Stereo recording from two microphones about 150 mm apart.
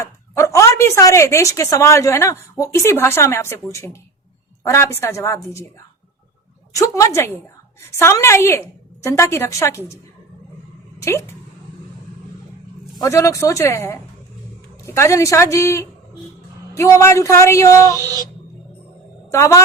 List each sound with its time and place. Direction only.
0.0 s a woman's voice: 20° left (ahead or behind)
6.7 s a woman's voice: 20° left (ahead or behind)
11.0 s speech: 15° left (ahead or behind)
13.0 s speech: 20° left (ahead or behind)
17.9 s a sound: 20° right (ahead or behind)
19.3 s speech: 20° left (ahead or behind)